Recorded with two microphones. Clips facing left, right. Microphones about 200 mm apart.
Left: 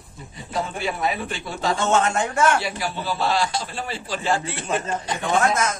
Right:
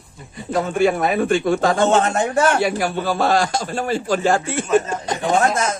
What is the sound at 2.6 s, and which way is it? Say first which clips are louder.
A man's voice: right 7 dB; 50° right (ahead or behind).